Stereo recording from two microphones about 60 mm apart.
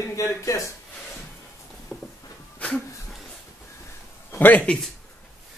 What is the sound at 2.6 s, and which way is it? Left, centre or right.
Speech, left.